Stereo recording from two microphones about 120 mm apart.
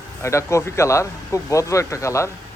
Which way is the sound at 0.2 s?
25° left (ahead or behind).